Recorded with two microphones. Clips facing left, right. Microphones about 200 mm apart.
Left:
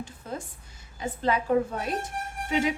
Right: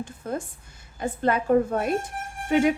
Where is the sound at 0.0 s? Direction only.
50° right (ahead or behind).